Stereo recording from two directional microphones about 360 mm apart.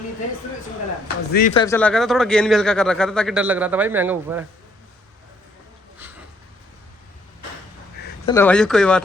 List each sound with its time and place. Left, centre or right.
1.0 s speech: left
1.6 s speech: centre
8.3 s speech: centre